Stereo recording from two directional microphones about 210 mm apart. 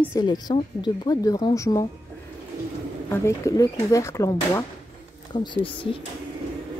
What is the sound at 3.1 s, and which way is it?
A woman's voice, 15° left (ahead or behind).